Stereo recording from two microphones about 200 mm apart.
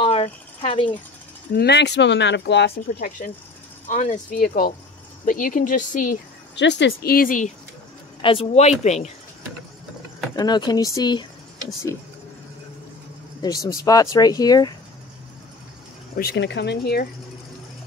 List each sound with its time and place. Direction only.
0.0 s cricket: 30° left (ahead or behind)
1.5 s speech: 55° left (ahead or behind)
3.8 s speech: 35° left (ahead or behind)
6.5 s speech: 60° left (ahead or behind); by 7.5 s 40° left (ahead or behind)
8.2 s speech: 25° left (ahead or behind)
10.3 s speech: 20° left (ahead or behind)
13.4 s speech: 15° left (ahead or behind)
16.2 s speech: 55° left (ahead or behind)